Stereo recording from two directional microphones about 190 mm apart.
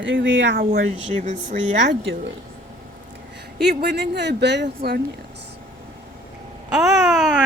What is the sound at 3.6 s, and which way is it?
Speech, 60° right (ahead or behind).